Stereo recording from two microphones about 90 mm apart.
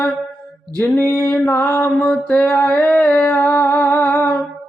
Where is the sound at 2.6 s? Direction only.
15° left (ahead or behind).